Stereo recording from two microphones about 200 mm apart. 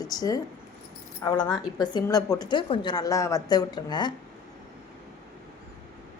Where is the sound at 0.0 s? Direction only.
20° left (ahead or behind).